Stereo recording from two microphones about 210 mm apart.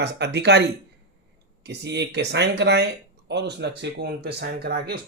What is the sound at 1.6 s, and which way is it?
Speech, 55° right (ahead or behind).